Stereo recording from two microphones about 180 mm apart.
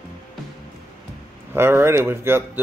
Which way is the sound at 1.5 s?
10° right (ahead or behind).